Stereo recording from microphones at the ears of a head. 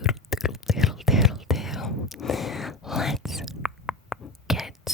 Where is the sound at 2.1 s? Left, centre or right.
Left.